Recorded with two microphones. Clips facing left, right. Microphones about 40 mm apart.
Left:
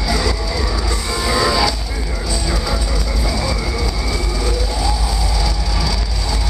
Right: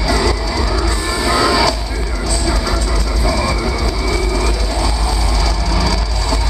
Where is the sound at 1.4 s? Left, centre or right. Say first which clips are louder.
Right 2 dB; centre.